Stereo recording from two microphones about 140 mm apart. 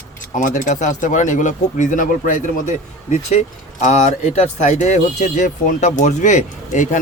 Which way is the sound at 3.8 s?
50° left (ahead or behind).